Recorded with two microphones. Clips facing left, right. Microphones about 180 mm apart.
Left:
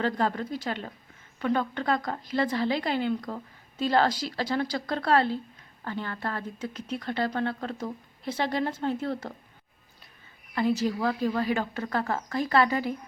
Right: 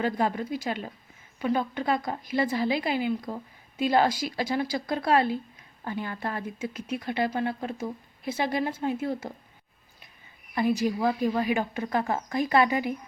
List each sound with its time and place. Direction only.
0.0 s a woman's voice: 10° right (ahead or behind)
10.5 s a woman's voice: 15° right (ahead or behind)